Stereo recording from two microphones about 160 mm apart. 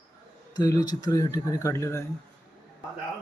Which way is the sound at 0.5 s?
25° left (ahead or behind).